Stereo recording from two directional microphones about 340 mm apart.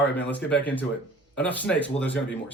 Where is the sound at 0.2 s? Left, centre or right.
Centre.